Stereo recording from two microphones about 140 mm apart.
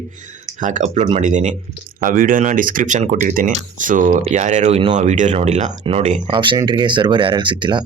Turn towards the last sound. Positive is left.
turn(degrees=-35)  # may be behind; listen again after turning